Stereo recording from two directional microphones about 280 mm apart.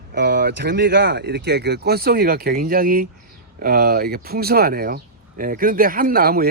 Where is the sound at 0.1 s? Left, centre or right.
Right.